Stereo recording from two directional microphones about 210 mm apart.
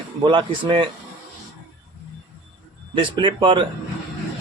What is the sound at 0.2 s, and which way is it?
Speech, 25° right (ahead or behind).